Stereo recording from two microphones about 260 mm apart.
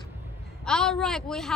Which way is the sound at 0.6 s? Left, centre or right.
Centre.